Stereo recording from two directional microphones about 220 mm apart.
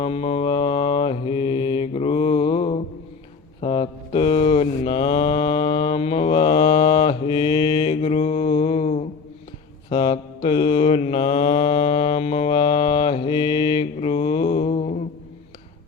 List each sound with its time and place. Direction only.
0.0 s mantra: 25° left (ahead or behind)